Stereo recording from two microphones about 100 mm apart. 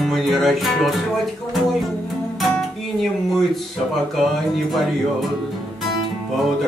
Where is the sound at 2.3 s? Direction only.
Centre (ahead or behind).